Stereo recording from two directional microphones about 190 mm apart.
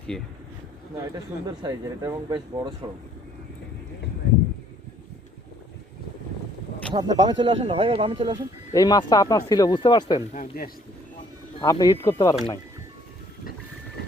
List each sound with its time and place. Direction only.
0.1 s speech: 5° left (ahead or behind)
0.9 s speech: 20° right (ahead or behind)
6.9 s speech: 20° right (ahead or behind)
8.7 s speech: 20° left (ahead or behind)
10.3 s speech: 45° left (ahead or behind)
11.6 s speech: 20° left (ahead or behind)